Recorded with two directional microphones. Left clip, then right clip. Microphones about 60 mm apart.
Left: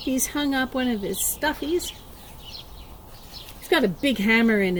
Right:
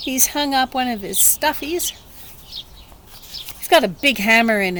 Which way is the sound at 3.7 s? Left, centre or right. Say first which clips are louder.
Right 7 dB; right.